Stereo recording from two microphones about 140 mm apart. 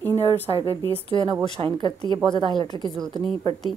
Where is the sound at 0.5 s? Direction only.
25° right (ahead or behind).